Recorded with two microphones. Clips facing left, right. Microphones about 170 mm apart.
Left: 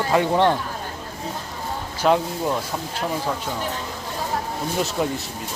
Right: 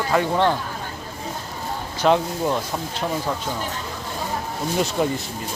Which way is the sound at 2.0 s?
5° left (ahead or behind).